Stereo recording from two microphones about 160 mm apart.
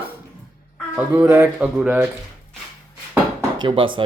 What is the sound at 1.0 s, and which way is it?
Speech, 10° right (ahead or behind).